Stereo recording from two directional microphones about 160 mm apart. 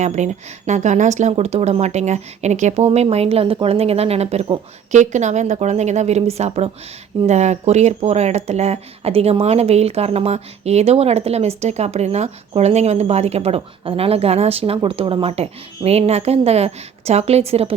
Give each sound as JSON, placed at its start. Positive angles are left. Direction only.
{"t": 0.0, "sound": "speech", "side_deg": -45}
{"t": 4.9, "sound": "speech", "side_deg": -45}